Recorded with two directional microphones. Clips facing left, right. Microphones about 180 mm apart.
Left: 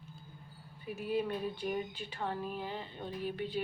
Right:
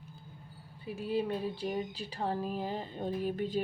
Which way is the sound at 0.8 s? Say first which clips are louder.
Right 2 dB; 30° right (ahead or behind).